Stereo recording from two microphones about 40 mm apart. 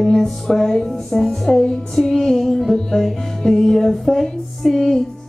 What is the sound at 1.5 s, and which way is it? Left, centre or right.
Music, centre.